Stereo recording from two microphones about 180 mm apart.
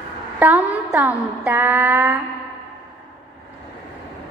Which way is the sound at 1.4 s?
10° right (ahead or behind).